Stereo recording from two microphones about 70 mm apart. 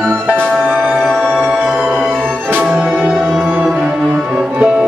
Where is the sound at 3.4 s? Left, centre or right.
Right.